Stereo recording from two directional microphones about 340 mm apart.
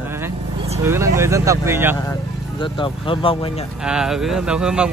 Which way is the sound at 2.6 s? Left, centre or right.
Centre.